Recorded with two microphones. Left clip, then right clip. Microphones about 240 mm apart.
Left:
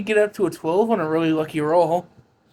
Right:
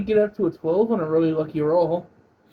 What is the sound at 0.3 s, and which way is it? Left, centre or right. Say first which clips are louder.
Speech: left 1 dB; left.